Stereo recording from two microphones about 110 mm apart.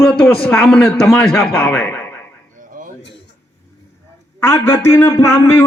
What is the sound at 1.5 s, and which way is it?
Speech, 20° left (ahead or behind).